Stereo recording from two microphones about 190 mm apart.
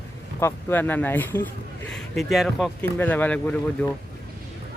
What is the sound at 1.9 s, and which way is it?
Speech, centre (ahead or behind).